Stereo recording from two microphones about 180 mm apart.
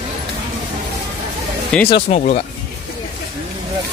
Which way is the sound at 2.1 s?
40° left (ahead or behind).